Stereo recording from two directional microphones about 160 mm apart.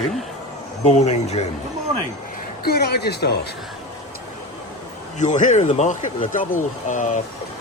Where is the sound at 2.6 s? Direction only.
85° left.